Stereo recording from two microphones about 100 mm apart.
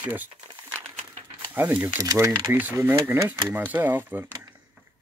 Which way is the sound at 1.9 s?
30° right (ahead or behind).